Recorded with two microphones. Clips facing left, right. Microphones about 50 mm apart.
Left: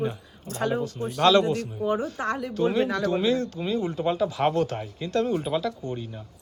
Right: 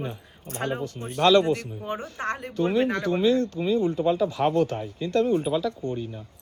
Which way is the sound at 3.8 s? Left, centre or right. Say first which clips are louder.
Right 2 dB; left.